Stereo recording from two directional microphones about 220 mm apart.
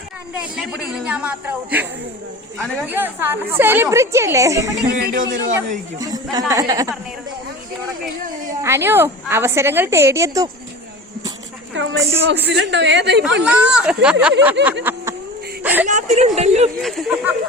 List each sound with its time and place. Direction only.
0.5 s a woman's voice: 5° right (ahead or behind)
4.9 s speech: 40° right (ahead or behind)
5.5 s a woman's voice: 15° right (ahead or behind)
8.6 s a woman's voice: 10° right (ahead or behind)
11.7 s a woman's voice: 60° right (ahead or behind)
13.4 s a woman's voice: 5° right (ahead or behind)
15.9 s speech: 30° right (ahead or behind)
16.8 s speech: centre (ahead or behind)